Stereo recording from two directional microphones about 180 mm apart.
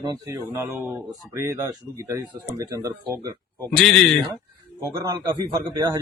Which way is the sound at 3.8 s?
5° left (ahead or behind).